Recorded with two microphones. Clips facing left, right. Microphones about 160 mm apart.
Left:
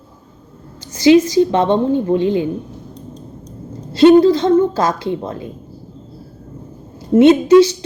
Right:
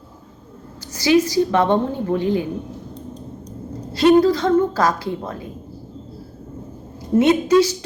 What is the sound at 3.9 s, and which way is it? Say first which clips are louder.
A woman's voice: left 5 dB; 25° left (ahead or behind).